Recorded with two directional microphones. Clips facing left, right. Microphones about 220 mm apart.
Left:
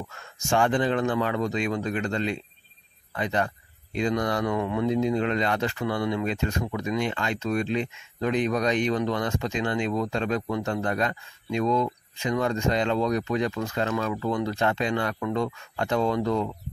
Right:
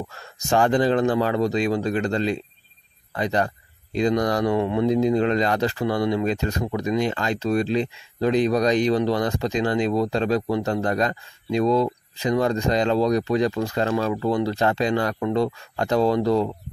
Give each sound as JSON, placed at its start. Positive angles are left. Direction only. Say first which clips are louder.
{"t": 0.1, "sound": "speech", "louder": "right 3 dB", "side_deg": -35}